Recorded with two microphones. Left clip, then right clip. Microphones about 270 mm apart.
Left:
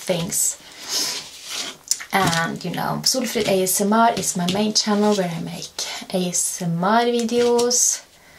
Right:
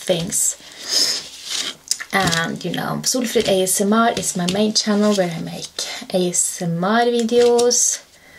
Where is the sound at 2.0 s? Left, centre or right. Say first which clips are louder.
Right 1 dB; centre.